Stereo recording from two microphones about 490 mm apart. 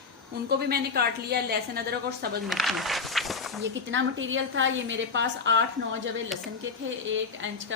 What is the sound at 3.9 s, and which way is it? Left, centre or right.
A woman's voice, right.